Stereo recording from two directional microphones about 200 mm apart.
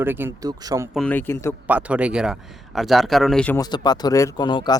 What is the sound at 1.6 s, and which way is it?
Speech, 5° right (ahead or behind).